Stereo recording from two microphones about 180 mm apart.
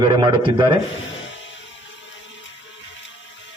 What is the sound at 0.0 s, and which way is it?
Speech, 25° right (ahead or behind).